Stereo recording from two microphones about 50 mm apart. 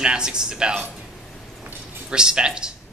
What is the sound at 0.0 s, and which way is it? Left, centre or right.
Speech, centre.